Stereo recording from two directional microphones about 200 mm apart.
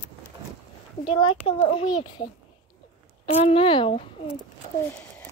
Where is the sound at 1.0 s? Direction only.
30° left (ahead or behind).